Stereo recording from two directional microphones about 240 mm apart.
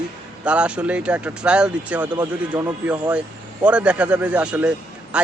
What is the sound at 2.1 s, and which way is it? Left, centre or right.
A man's voice, centre.